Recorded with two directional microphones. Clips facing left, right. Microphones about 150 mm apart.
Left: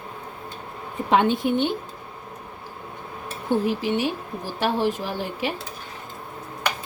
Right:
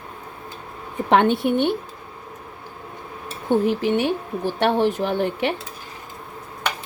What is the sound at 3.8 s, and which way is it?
Speech, 55° right (ahead or behind).